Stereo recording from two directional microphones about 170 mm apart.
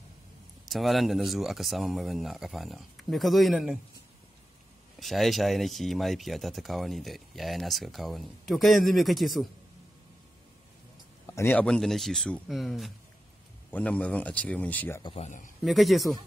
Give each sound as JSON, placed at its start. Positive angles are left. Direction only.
{"t": 0.7, "sound": "speech", "side_deg": 0}
{"t": 5.0, "sound": "speech", "side_deg": 0}
{"t": 11.2, "sound": "a man's voice", "side_deg": 15}
{"t": 15.0, "sound": "a man's voice", "side_deg": 40}
{"t": 15.6, "sound": "speech", "side_deg": 0}